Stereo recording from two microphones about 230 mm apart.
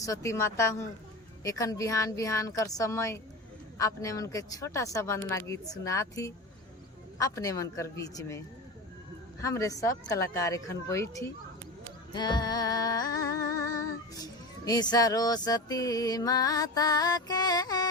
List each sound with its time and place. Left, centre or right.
0.0 s speech: centre
9.4 s speech: centre
12.1 s music: centre